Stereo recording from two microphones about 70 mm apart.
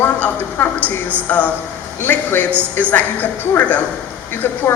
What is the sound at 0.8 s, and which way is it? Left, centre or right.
Speech, right.